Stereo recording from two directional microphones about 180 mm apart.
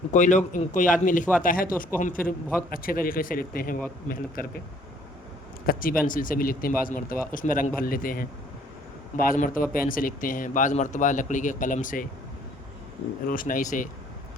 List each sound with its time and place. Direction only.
0.1 s speech: 40° left (ahead or behind)
5.6 s speech: 50° left (ahead or behind)
13.2 s speech: 50° left (ahead or behind)